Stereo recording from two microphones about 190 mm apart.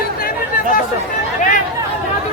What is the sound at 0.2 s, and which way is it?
Chatter, 50° left (ahead or behind).